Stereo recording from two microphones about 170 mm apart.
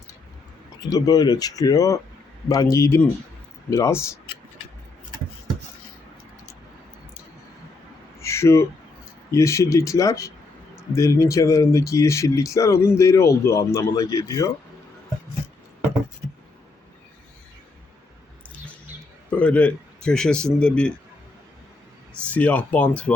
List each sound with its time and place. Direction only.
0.8 s speech: 20° left (ahead or behind)
8.2 s a sound: 15° left (ahead or behind)
9.3 s speech: 15° left (ahead or behind)
19.3 s a man's voice: 5° left (ahead or behind)
22.3 s speech: 10° left (ahead or behind)